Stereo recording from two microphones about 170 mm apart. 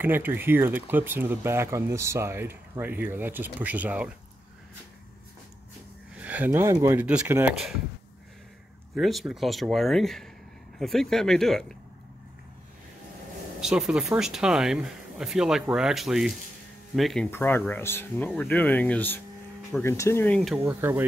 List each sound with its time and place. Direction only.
0.0 s speech: 10° right (ahead or behind)
6.1 s speech: 10° right (ahead or behind)
8.9 s speech: centre (ahead or behind)
13.6 s speech: 5° right (ahead or behind)
17.3 s speech: 15° left (ahead or behind)
20.6 s speech: 15° right (ahead or behind)